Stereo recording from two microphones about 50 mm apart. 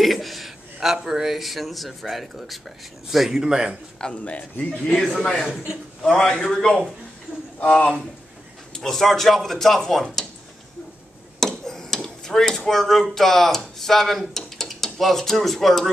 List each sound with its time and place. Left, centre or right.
0.0 s a man's voice: centre
4.0 s speech: left
4.8 s speech: centre
8.7 s speech: centre
11.3 s a sound: centre
13.1 s speech: centre